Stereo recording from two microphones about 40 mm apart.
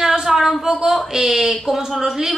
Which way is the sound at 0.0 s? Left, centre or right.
Centre.